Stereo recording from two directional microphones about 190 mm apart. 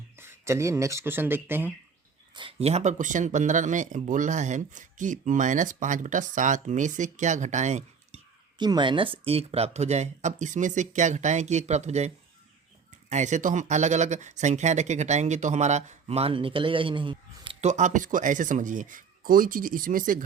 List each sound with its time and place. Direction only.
0.2 s speech: 15° right (ahead or behind)
2.3 s speech: 30° right (ahead or behind)
8.5 s speech: 25° right (ahead or behind); by 20.2 s 45° right (ahead or behind)